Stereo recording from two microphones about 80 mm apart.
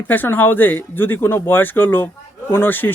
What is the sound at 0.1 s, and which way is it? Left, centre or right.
Speech, left.